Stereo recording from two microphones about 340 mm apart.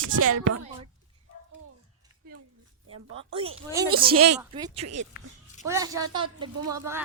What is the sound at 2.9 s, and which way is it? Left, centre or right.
Speech, right.